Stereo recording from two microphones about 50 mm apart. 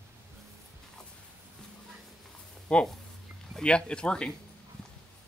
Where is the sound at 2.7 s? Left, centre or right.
Centre.